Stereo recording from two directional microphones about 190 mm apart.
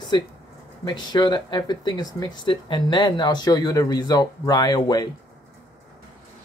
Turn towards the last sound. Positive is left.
turn(degrees=20)  # may be behind; listen again after turning